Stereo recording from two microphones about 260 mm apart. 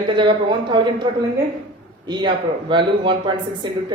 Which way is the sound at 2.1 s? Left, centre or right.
Centre.